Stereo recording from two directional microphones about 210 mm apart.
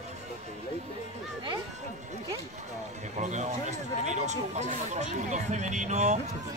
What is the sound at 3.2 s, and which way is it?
Speech, 35° right (ahead or behind).